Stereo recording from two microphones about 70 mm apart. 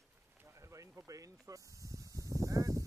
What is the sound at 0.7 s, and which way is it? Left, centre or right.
Speech, right.